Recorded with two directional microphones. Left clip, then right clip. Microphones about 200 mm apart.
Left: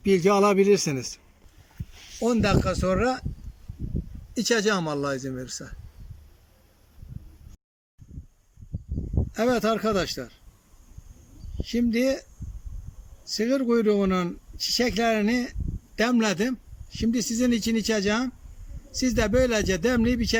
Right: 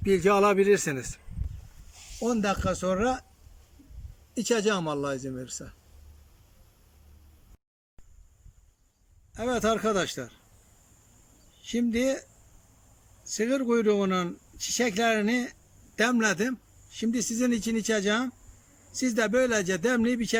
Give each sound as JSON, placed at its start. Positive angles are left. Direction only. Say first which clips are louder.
{"t": 0.0, "sound": "a man's voice", "louder": "left 2 dB", "side_deg": 5}
{"t": 4.4, "sound": "speech", "louder": "left 3 dB", "side_deg": 0}
{"t": 9.3, "sound": "speech", "louder": "left 3 dB", "side_deg": 0}
{"t": 11.6, "sound": "speech", "louder": "left 3 dB", "side_deg": 5}
{"t": 13.2, "sound": "speech", "louder": "left 3 dB", "side_deg": 5}